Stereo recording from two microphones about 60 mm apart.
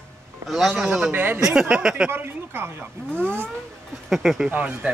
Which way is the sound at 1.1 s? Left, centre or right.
Right.